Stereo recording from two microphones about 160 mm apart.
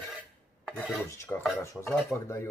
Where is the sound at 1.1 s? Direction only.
15° left (ahead or behind).